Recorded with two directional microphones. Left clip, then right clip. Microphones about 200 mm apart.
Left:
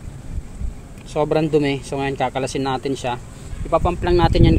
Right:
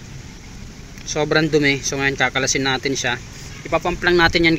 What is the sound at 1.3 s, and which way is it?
Speech, 5° left (ahead or behind).